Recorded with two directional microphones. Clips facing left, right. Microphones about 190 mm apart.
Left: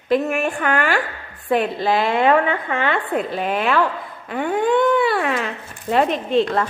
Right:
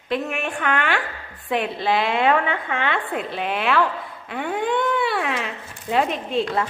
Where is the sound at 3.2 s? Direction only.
45° left (ahead or behind).